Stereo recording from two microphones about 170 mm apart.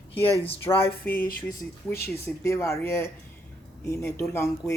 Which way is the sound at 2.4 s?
15° left (ahead or behind).